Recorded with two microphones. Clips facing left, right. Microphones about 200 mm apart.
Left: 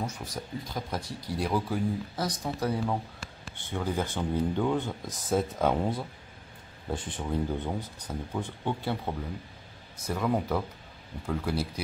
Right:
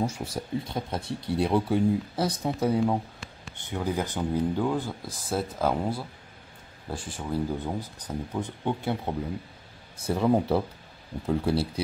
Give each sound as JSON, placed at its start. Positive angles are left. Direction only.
{"t": 0.0, "sound": "speech", "side_deg": -30}
{"t": 3.7, "sound": "speech", "side_deg": -10}
{"t": 7.2, "sound": "speech", "side_deg": -5}
{"t": 8.1, "sound": "speech", "side_deg": -15}
{"t": 9.9, "sound": "speech", "side_deg": -30}